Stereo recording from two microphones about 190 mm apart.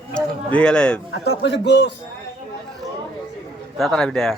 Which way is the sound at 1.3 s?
65° left (ahead or behind).